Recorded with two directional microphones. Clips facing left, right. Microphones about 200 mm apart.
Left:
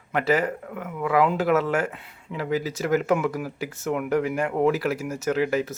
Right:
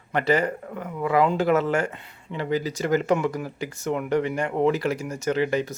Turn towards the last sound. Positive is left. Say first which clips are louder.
# even
turn(degrees=5)  # may be behind; listen again after turning